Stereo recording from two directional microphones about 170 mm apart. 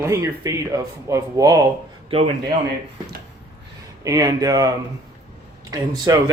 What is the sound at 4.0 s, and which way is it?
Speech, 20° right (ahead or behind).